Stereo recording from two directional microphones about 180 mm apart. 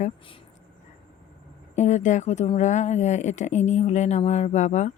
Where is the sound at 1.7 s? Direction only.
40° left (ahead or behind).